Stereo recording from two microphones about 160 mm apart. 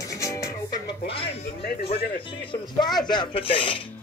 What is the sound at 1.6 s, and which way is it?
Speech, 70° left (ahead or behind).